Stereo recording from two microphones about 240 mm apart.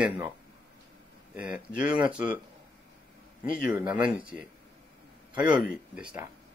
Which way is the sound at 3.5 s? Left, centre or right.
Left.